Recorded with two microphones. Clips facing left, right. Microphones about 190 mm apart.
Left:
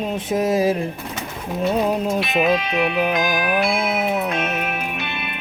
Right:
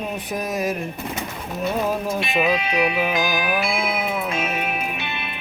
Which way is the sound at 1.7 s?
20° left (ahead or behind).